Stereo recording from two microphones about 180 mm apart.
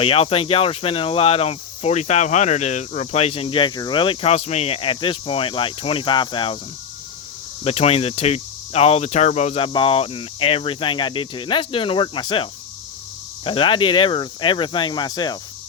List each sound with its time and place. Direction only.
0.0 s speech: 30° left (ahead or behind)
7.6 s speech: 35° left (ahead or behind)